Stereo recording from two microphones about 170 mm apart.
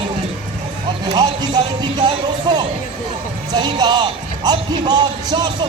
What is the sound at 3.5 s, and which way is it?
Speech, 25° right (ahead or behind).